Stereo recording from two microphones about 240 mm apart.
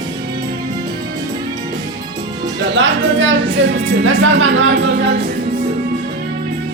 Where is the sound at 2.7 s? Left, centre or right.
Right.